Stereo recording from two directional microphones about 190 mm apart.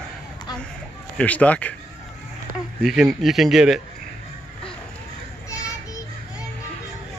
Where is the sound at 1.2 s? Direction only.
5° left (ahead or behind).